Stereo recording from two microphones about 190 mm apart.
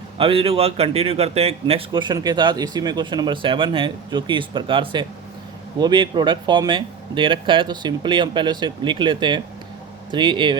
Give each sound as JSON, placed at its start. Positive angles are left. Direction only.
{"t": 0.2, "sound": "speech", "side_deg": -30}